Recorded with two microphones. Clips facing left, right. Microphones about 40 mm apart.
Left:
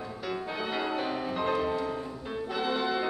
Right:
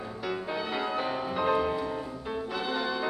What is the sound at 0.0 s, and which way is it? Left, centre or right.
Music, centre.